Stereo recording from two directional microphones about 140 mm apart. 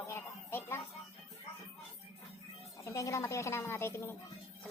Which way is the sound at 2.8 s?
25° left (ahead or behind).